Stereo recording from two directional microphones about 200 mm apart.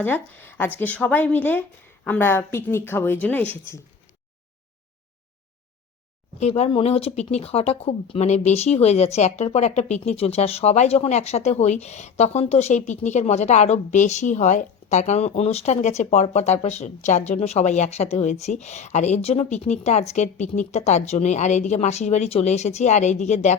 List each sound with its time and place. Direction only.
0.0 s speech: 10° left (ahead or behind)
6.4 s speech: 30° left (ahead or behind)